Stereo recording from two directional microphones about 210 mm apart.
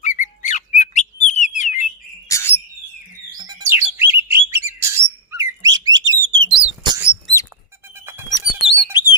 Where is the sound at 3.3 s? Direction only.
15° right (ahead or behind).